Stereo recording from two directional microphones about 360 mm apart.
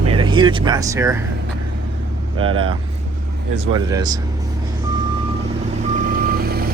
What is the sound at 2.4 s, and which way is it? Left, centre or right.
Speech, centre.